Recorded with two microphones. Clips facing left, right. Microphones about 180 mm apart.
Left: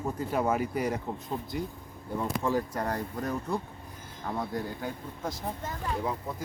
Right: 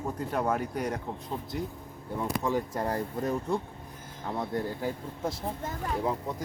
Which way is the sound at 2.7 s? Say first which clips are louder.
Right 1 dB; 25° right (ahead or behind).